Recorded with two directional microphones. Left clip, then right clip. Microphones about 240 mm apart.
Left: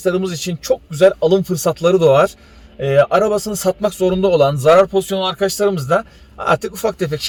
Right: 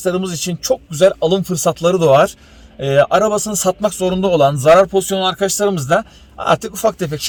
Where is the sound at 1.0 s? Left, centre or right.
Centre.